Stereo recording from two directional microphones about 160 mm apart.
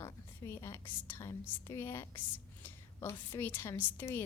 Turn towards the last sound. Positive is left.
turn(degrees=15)  # may be behind; listen again after turning